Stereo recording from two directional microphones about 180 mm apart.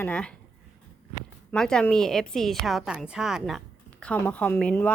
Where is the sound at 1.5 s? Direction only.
5° left (ahead or behind).